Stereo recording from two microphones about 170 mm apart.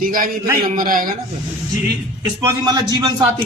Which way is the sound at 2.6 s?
25° right (ahead or behind).